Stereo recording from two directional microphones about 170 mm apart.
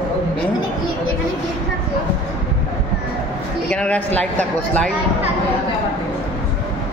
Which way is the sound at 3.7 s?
5° left (ahead or behind).